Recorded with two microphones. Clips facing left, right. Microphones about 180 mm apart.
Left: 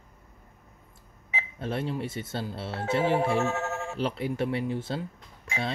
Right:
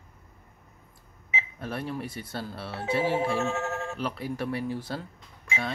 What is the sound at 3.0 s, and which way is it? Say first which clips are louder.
Music: left 2 dB; 60° left (ahead or behind).